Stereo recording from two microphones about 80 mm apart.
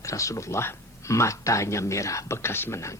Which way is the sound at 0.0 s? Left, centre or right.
Left.